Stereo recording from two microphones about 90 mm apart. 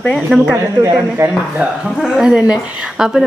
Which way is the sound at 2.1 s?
10° right (ahead or behind).